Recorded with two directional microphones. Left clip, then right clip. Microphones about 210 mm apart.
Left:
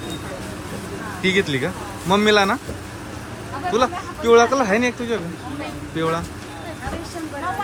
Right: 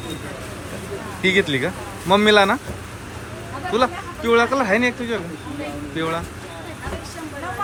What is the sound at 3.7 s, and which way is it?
Speech, 15° left (ahead or behind).